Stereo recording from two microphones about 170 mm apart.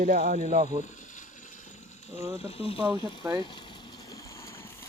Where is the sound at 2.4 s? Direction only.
35° left (ahead or behind).